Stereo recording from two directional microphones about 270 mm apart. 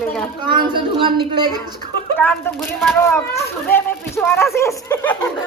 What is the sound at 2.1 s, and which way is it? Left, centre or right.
A woman's voice, centre.